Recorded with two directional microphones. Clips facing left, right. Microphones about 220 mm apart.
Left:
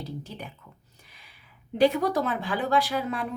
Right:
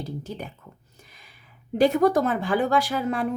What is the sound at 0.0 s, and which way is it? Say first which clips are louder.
Speech: right 4 dB; 45° right (ahead or behind).